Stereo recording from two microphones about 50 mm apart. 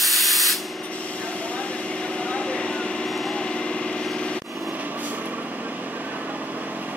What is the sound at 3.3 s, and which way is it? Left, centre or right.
Vehicle, centre.